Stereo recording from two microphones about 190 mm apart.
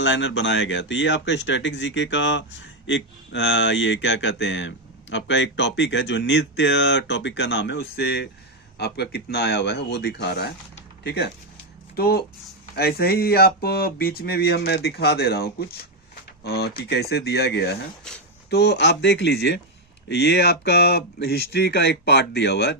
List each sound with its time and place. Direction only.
0.0 s speech: 75° left (ahead or behind)
18.1 s speech: 5° left (ahead or behind)
18.5 s speech: 60° left (ahead or behind)